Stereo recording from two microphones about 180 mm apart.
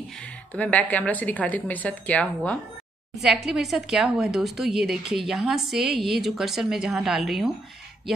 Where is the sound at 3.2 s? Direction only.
5° right (ahead or behind).